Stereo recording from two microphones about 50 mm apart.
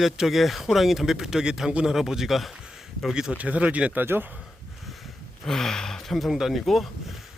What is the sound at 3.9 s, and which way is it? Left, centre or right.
Speech, right.